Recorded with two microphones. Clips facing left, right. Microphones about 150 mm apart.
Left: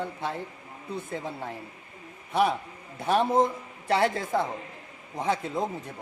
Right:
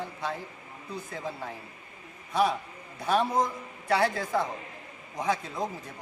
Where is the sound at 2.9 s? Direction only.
25° left (ahead or behind).